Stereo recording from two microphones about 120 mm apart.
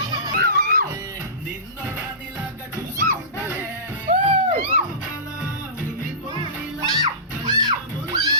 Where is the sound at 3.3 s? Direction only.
15° right (ahead or behind).